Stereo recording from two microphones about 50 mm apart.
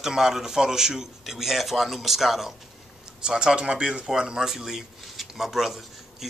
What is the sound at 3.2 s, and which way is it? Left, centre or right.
Speech, centre.